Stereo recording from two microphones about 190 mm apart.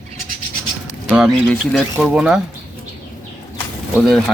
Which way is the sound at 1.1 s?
Centre (ahead or behind).